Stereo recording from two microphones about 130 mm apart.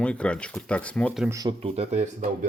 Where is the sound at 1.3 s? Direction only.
30° right (ahead or behind).